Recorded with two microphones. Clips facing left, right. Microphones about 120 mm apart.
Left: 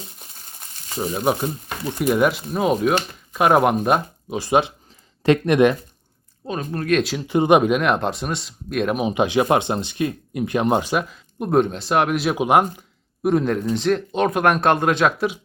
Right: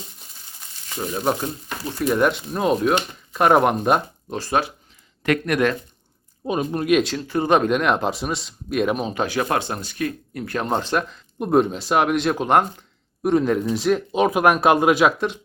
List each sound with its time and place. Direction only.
1.1 s speech: 10° left (ahead or behind)
4.4 s speech: 15° left (ahead or behind)
6.4 s speech: 15° right (ahead or behind)
7.2 s speech: 20° left (ahead or behind)
7.7 s speech: centre (ahead or behind)
9.0 s speech: 15° left (ahead or behind); by 15.1 s 5° right (ahead or behind)